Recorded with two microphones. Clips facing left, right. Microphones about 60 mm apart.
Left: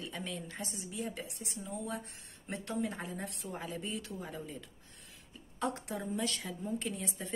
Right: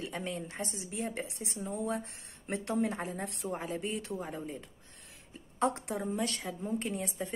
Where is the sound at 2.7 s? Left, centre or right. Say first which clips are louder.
Right 3 dB; right.